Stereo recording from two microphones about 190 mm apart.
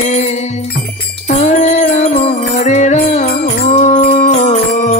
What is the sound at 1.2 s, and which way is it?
Music, 35° left (ahead or behind).